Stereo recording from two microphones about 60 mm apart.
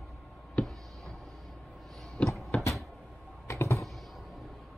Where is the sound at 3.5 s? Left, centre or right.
Left.